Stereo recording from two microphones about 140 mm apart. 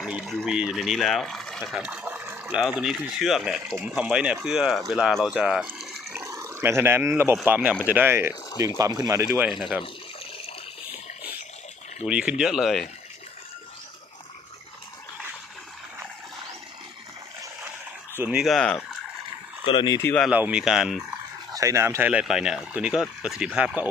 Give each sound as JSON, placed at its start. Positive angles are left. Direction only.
{"t": 0.0, "sound": "speech", "side_deg": -5}
{"t": 2.6, "sound": "speech", "side_deg": 0}
{"t": 6.1, "sound": "speech", "side_deg": -20}
{"t": 8.8, "sound": "speech", "side_deg": -25}
{"t": 9.5, "sound": "speech", "side_deg": 0}
{"t": 12.0, "sound": "speech", "side_deg": -5}
{"t": 18.2, "sound": "speech", "side_deg": -5}
{"t": 19.6, "sound": "speech", "side_deg": 35}
{"t": 20.3, "sound": "speech", "side_deg": -10}
{"t": 21.5, "sound": "speech", "side_deg": -20}